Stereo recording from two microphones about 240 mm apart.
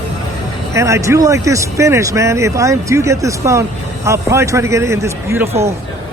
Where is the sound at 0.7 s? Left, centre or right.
Centre.